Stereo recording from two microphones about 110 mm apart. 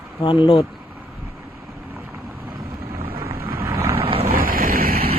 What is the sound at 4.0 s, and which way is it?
Vehicle, 60° right (ahead or behind).